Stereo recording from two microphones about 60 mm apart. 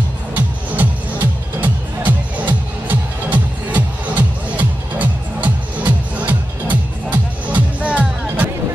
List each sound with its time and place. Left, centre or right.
0.3 s music: right